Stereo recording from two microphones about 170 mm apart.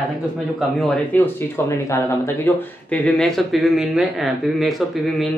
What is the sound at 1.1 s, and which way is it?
Speech, 15° left (ahead or behind).